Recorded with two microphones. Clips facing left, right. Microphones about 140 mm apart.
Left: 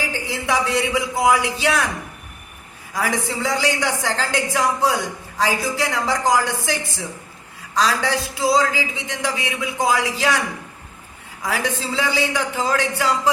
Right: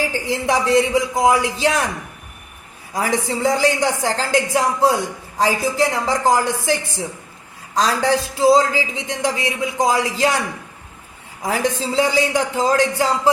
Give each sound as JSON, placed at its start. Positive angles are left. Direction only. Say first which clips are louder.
{"t": 0.3, "sound": "a man's voice", "louder": "right 4 dB", "side_deg": -35}
{"t": 2.9, "sound": "a man's voice", "louder": "right 3 dB", "side_deg": -35}
{"t": 7.8, "sound": "a man's voice", "louder": "right 3 dB", "side_deg": -35}
{"t": 11.4, "sound": "a man's voice", "louder": "right 3 dB", "side_deg": -35}